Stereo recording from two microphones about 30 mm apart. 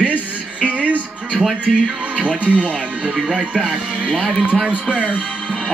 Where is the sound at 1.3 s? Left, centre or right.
Centre.